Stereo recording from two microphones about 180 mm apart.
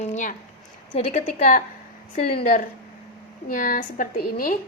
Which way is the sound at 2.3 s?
55° left (ahead or behind).